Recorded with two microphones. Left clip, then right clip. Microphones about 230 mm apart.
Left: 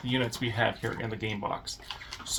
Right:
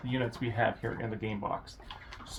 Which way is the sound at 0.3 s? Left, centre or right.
Centre.